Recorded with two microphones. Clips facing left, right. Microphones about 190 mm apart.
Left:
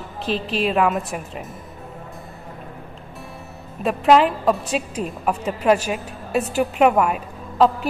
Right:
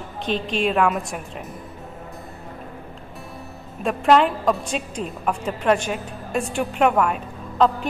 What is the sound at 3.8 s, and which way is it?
Speech, 5° left (ahead or behind).